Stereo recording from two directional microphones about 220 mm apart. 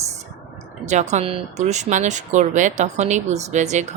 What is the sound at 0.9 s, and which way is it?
Speech, 30° right (ahead or behind).